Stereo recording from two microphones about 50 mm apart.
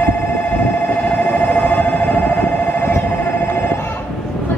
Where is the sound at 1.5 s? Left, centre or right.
Left.